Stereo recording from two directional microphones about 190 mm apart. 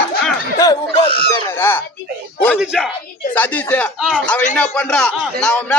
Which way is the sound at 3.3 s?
10° left (ahead or behind).